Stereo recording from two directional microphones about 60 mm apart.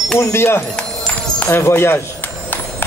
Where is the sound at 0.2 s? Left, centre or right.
Left.